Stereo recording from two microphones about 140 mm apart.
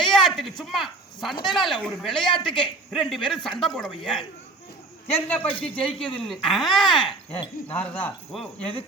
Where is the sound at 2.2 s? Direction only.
35° left (ahead or behind).